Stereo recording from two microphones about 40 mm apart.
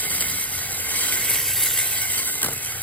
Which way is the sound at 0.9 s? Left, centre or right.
Left.